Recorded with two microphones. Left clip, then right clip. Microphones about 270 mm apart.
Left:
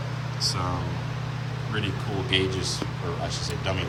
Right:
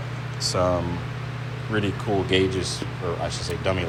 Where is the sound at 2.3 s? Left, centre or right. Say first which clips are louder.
Left 1 dB; centre.